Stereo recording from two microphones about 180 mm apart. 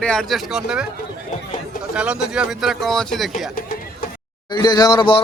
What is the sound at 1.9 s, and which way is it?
Speech, 5° right (ahead or behind).